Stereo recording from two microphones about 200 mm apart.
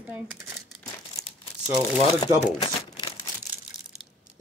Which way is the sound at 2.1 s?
30° left (ahead or behind).